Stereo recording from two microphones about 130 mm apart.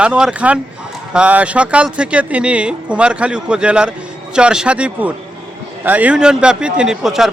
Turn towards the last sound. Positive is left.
turn(degrees=-5)  # may be behind; listen again after turning